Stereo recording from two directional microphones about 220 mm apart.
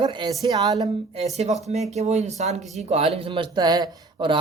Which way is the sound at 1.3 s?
30° right (ahead or behind).